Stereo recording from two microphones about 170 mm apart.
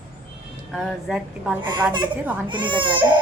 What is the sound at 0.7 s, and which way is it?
Speech, centre (ahead or behind).